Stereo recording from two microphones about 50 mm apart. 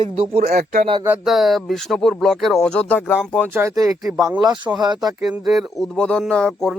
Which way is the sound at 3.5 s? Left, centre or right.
Right.